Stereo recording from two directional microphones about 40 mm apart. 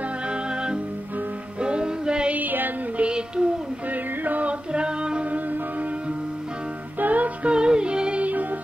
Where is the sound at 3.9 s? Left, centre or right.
Right.